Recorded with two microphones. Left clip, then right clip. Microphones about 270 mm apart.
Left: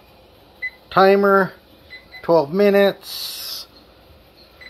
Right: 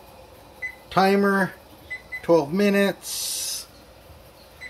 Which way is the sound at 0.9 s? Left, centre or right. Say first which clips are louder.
Left 7 dB; centre.